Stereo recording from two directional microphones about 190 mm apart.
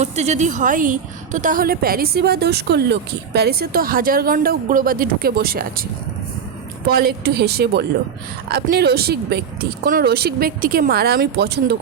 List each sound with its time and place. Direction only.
0.0 s a woman's voice: 35° right (ahead or behind); by 5.8 s 50° right (ahead or behind)
6.8 s speech: 55° right (ahead or behind)